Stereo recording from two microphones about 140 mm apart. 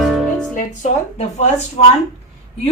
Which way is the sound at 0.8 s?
55° left (ahead or behind).